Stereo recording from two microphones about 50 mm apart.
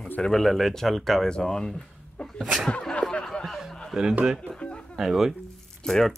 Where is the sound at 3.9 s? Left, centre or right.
Centre.